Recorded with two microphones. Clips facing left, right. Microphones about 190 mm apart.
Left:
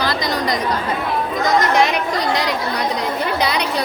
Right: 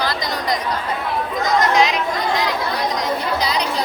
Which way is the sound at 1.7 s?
60° left (ahead or behind).